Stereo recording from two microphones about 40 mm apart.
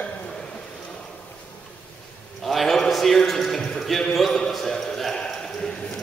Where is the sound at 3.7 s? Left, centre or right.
Centre.